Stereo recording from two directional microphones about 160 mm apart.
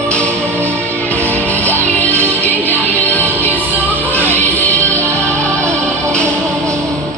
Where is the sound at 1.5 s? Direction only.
10° left (ahead or behind).